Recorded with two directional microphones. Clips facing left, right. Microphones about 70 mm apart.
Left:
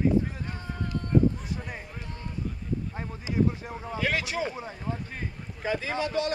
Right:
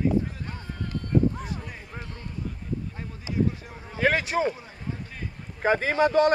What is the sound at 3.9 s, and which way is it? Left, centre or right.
Speech, right.